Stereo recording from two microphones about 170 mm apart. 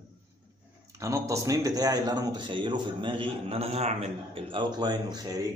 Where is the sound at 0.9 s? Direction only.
15° right (ahead or behind).